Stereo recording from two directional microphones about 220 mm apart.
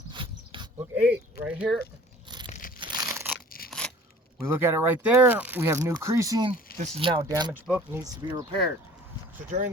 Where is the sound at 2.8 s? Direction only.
15° right (ahead or behind).